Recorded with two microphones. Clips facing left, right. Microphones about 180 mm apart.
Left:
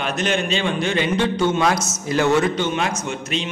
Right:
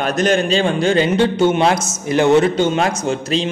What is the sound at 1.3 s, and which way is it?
A man's voice, 25° right (ahead or behind).